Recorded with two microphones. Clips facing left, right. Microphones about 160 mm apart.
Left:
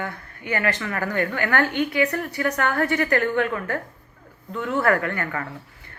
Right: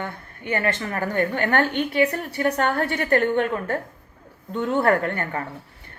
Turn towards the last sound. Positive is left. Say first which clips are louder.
# right 1 dB
turn(degrees=-25)  # may be behind; listen again after turning